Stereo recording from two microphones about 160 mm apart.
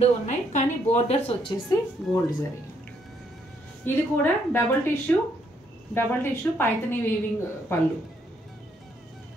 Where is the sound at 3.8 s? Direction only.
10° left (ahead or behind).